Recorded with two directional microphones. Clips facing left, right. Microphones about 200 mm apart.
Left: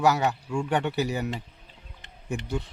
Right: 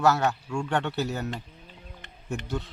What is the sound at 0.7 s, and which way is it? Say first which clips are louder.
Speech: left 2 dB; 15° left (ahead or behind).